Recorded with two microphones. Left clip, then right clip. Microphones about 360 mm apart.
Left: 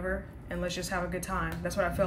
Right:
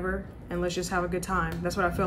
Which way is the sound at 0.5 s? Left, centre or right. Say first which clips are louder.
Right 4 dB; centre.